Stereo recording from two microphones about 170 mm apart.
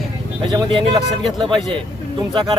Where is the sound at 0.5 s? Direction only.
30° right (ahead or behind).